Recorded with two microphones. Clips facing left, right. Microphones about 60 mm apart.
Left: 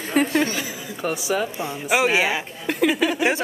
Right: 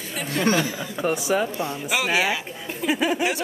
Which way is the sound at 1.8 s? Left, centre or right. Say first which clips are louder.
Left 4 dB; centre.